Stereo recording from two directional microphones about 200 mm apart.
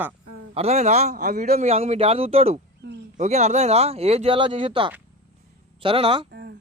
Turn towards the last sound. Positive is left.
turn(degrees=-55)  # may be behind; listen again after turning